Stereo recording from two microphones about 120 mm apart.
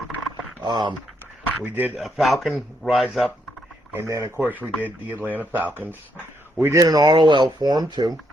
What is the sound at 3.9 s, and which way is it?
Speech, 25° right (ahead or behind).